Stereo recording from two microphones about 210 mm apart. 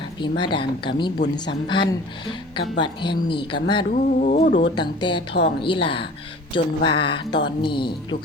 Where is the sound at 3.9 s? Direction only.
40° left (ahead or behind).